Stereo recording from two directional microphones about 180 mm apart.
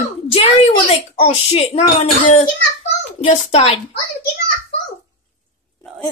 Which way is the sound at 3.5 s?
35° left (ahead or behind).